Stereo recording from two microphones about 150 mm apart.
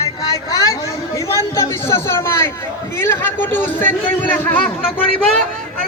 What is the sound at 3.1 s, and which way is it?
A man's voice, 15° left (ahead or behind).